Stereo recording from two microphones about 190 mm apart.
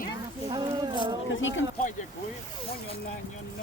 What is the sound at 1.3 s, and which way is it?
Speech, 80° left.